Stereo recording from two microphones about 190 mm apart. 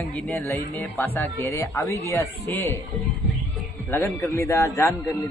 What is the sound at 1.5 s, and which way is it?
A man's voice, 15° left (ahead or behind).